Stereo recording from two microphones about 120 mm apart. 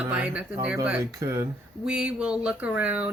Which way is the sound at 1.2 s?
25° right (ahead or behind).